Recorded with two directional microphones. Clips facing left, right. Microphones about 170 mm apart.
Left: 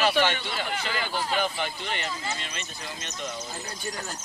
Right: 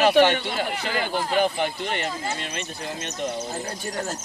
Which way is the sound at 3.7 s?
35° right (ahead or behind).